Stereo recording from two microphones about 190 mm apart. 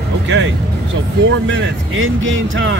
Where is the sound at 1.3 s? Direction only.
80° right.